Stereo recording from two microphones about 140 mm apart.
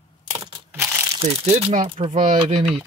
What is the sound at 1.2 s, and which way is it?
Speech, 50° right (ahead or behind).